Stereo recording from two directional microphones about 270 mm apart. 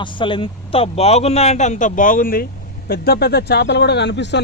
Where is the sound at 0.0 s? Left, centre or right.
Centre.